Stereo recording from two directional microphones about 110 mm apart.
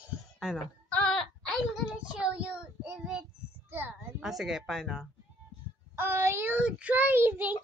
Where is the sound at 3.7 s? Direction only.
20° right (ahead or behind).